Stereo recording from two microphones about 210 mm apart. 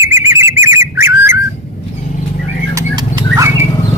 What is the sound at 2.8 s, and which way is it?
Horse, 20° right (ahead or behind).